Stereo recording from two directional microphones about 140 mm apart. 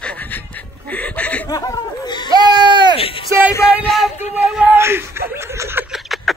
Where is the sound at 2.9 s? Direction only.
40° left (ahead or behind).